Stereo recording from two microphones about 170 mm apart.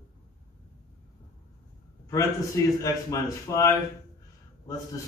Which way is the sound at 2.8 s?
20° left (ahead or behind).